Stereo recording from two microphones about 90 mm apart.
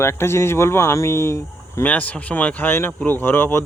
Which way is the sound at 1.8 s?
15° left (ahead or behind).